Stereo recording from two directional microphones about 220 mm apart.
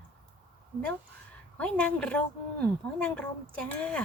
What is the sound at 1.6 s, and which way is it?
Speech, 5° left (ahead or behind).